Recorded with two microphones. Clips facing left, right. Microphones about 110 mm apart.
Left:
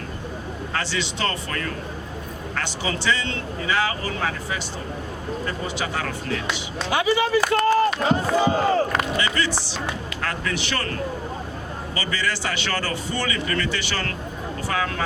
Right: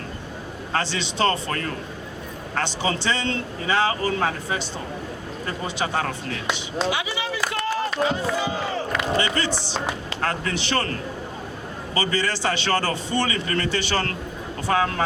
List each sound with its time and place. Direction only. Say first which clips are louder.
0.7 s a man's voice: right 2 dB; 30° right (ahead or behind)
6.9 s speech: left 8 dB; 45° left (ahead or behind)
9.1 s a man's voice: right 1 dB; 35° right (ahead or behind)
11.9 s a man's voice: right 3 dB; 30° right (ahead or behind)